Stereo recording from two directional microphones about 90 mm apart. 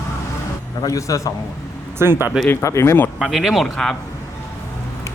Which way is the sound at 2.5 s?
35° left (ahead or behind).